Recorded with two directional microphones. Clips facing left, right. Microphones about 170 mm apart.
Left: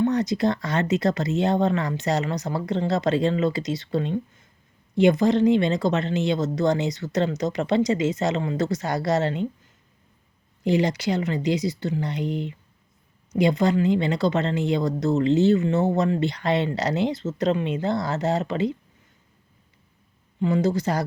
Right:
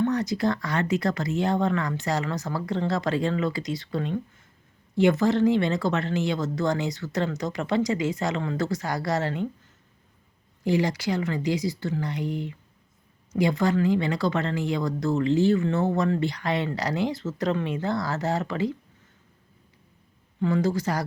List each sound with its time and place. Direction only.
0.0 s speech: 20° left (ahead or behind)
10.6 s speech: 20° left (ahead or behind)
20.4 s speech: 20° left (ahead or behind)